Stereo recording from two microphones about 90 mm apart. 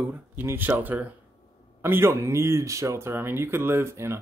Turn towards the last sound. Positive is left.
turn(degrees=-30)  # may be behind; listen again after turning